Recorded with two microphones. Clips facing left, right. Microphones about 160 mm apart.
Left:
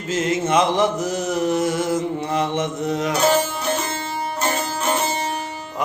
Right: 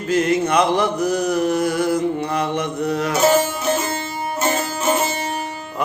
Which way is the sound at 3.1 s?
Centre (ahead or behind).